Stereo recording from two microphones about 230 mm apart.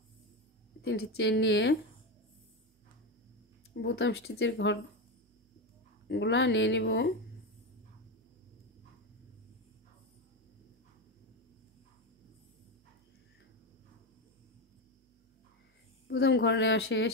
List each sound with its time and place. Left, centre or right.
0.8 s speech: left
3.7 s speech: left
6.0 s speech: left
16.1 s speech: left